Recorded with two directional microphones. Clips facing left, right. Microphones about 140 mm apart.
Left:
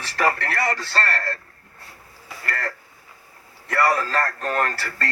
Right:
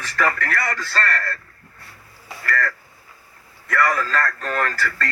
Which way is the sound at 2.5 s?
30° left (ahead or behind).